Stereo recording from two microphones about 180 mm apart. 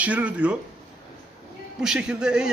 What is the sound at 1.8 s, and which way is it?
Speech, 5° right (ahead or behind).